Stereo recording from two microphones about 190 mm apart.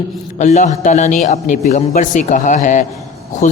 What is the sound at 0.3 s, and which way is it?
Speech, 40° left (ahead or behind).